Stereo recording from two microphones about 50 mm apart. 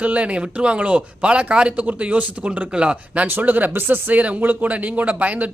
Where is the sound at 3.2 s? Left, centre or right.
Right.